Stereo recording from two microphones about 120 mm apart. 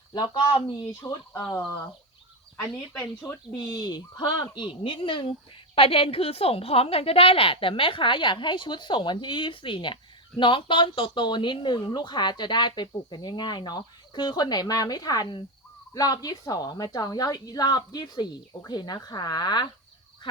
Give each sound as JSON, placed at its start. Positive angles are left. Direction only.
{"t": 1.0, "sound": "speech", "side_deg": 25}
{"t": 2.6, "sound": "a woman's voice", "side_deg": 30}